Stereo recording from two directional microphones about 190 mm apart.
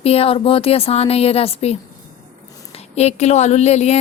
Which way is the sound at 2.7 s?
35° left (ahead or behind).